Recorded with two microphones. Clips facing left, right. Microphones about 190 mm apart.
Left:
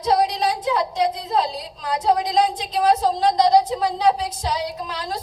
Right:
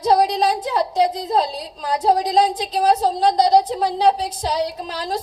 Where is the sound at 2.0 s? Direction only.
35° right (ahead or behind).